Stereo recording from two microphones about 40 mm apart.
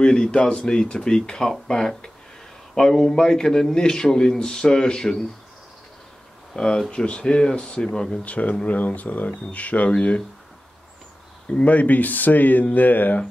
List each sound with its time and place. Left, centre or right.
0.0 s a man's voice: centre
6.5 s speech: centre
8.2 s speech: left
11.4 s speech: left
11.7 s speech: left